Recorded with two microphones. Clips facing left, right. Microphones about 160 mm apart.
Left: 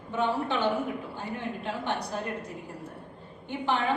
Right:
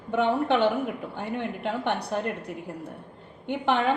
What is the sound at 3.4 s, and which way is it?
Speech, 65° right (ahead or behind).